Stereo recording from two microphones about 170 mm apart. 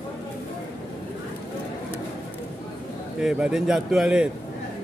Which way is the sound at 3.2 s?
5° right (ahead or behind).